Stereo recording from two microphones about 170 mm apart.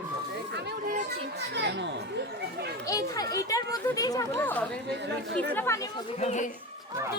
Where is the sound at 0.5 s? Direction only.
65° right (ahead or behind); by 1.9 s 85° right.